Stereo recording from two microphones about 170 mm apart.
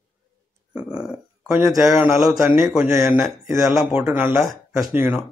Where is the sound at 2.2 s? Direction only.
5° right (ahead or behind).